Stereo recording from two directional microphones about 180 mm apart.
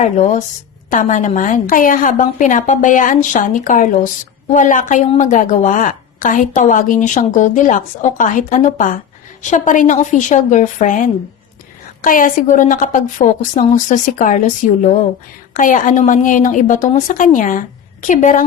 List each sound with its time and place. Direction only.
0.0 s a woman's voice: 40° left (ahead or behind)